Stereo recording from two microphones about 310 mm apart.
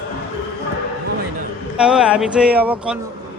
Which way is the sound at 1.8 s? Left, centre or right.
Centre.